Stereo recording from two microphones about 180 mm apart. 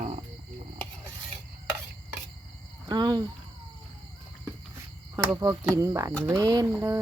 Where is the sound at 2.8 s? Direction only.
25° right (ahead or behind).